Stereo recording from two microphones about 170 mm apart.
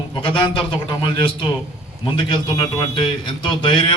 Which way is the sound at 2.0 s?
25° left (ahead or behind).